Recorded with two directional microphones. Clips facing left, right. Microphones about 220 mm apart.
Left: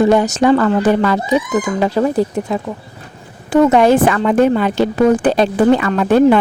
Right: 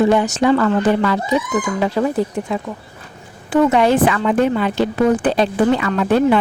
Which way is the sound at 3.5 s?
45° left (ahead or behind).